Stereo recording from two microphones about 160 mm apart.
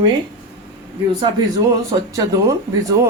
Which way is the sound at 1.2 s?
25° right (ahead or behind).